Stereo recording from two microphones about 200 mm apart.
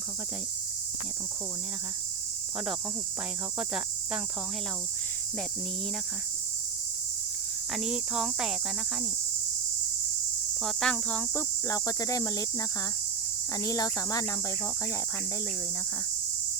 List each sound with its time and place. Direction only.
7.7 s speech: 5° right (ahead or behind)
10.6 s speech: centre (ahead or behind); by 14.3 s 15° left (ahead or behind)